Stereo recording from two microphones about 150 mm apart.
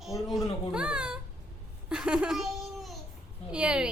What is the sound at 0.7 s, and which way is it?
Speech, 5° right (ahead or behind).